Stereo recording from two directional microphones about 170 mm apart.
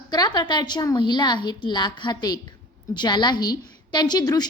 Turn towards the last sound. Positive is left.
turn(degrees=20)  # may be behind; listen again after turning